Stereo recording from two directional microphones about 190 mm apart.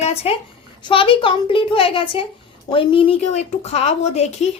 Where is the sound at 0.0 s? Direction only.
30° left (ahead or behind).